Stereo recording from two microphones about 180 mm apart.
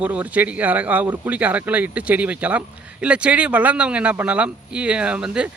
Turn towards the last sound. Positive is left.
turn(degrees=-5)  # may be behind; listen again after turning